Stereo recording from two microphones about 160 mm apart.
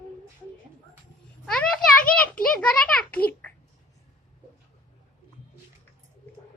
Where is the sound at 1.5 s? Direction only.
5° left (ahead or behind).